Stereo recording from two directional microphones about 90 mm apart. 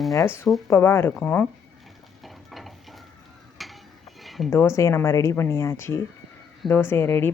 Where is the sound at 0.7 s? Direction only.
30° left (ahead or behind).